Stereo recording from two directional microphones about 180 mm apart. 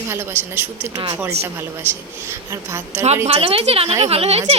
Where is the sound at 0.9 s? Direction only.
25° right (ahead or behind).